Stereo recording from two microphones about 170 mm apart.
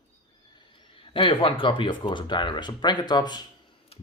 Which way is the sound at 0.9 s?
30° left (ahead or behind).